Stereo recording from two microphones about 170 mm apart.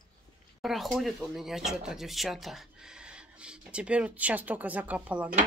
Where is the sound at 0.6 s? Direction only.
Centre (ahead or behind).